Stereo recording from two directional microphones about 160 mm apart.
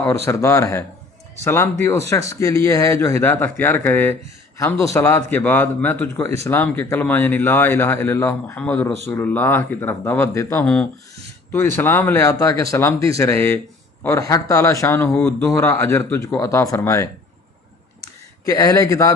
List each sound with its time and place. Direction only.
0.3 s a man's voice: 20° left (ahead or behind)
11.8 s a man's voice: 15° left (ahead or behind)
18.4 s speech: 20° left (ahead or behind)